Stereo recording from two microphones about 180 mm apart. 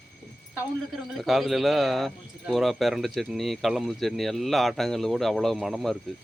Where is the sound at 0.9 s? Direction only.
Centre (ahead or behind).